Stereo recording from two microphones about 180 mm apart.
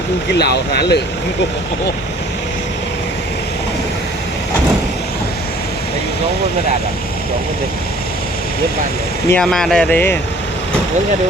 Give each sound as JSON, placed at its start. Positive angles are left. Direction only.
{"t": 0.3, "sound": "speech", "side_deg": 65}
{"t": 9.3, "sound": "speech", "side_deg": 5}